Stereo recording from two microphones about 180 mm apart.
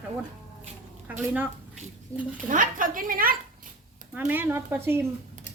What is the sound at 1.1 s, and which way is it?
Speech, 10° right (ahead or behind).